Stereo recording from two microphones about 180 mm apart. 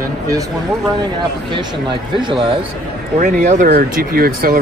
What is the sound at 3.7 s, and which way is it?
Speech, 55° right (ahead or behind).